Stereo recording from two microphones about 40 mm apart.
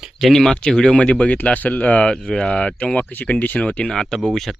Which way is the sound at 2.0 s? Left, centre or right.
Centre.